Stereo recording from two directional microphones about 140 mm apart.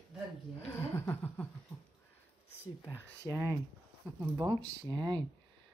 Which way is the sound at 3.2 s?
20° right (ahead or behind).